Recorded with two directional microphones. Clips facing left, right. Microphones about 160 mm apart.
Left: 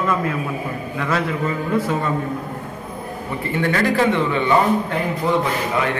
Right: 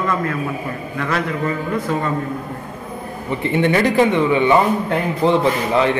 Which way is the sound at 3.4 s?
20° right (ahead or behind).